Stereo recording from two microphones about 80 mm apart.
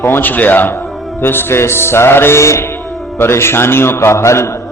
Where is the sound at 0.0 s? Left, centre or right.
Left.